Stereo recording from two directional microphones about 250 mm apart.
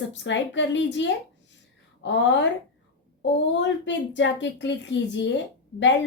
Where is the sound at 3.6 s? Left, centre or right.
Left.